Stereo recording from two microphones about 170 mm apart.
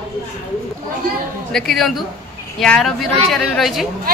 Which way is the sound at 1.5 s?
Centre (ahead or behind).